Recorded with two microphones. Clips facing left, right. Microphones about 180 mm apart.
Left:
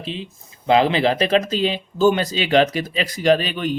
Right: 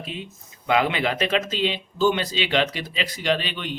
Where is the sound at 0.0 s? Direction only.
30° left (ahead or behind).